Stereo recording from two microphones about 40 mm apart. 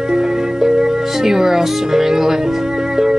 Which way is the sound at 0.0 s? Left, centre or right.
Centre.